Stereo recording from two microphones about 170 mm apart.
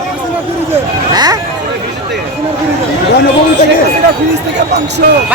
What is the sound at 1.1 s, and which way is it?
Speech, 25° right (ahead or behind).